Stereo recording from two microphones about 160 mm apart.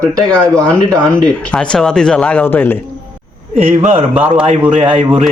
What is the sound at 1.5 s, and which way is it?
Speech, 5° left (ahead or behind).